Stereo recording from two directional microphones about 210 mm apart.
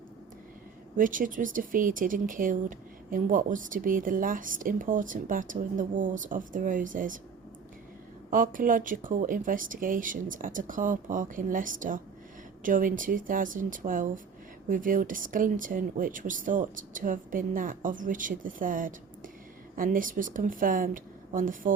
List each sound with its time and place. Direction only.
0.9 s speech: 40° right (ahead or behind)
8.3 s speech: 40° right (ahead or behind)